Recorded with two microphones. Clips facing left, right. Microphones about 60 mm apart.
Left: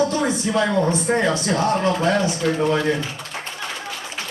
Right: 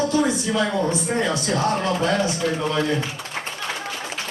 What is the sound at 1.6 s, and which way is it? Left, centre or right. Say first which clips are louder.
Speech: even; left.